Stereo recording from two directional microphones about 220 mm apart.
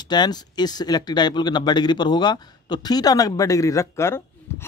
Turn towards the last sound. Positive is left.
turn(degrees=10)  # may be behind; listen again after turning